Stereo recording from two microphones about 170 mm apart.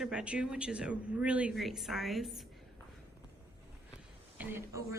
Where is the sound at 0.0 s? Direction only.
5° right (ahead or behind).